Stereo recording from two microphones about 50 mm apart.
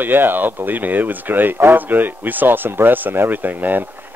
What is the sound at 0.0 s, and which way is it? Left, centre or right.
Speech, right.